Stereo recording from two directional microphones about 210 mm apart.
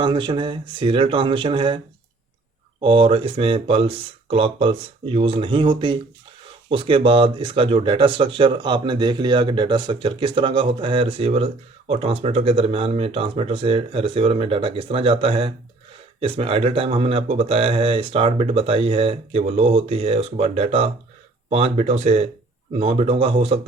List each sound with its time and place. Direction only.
0.0 s speech: 20° right (ahead or behind)
2.8 s speech: 25° right (ahead or behind)